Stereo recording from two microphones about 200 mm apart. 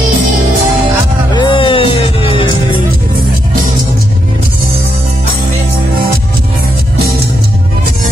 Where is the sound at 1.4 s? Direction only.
25° left (ahead or behind).